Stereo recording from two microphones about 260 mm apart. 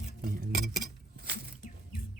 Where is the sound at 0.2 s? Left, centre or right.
Right.